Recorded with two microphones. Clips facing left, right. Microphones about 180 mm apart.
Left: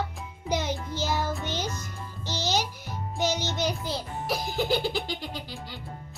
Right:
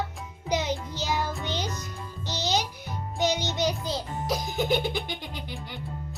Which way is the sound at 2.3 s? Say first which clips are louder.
Even; 15° right (ahead or behind).